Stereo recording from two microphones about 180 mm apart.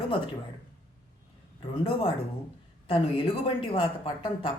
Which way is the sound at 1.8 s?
30° left (ahead or behind).